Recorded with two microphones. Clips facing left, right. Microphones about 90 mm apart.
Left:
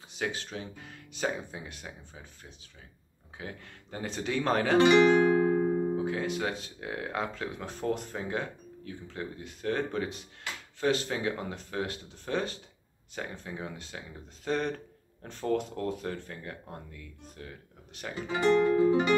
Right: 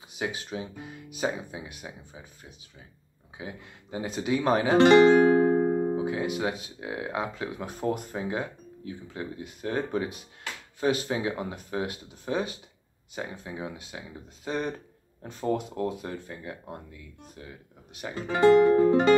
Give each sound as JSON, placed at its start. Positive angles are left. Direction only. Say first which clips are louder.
{"t": 0.2, "sound": "speech", "louder": "right 2 dB", "side_deg": -15}
{"t": 3.3, "sound": "speech", "louder": "right 2 dB", "side_deg": -10}
{"t": 4.8, "sound": "speech", "louder": "right 5 dB", "side_deg": -45}
{"t": 5.4, "sound": "music", "louder": "right 3 dB", "side_deg": -30}
{"t": 6.0, "sound": "speech", "louder": "right 2 dB", "side_deg": -15}
{"t": 18.7, "sound": "music", "louder": "right 4 dB", "side_deg": -45}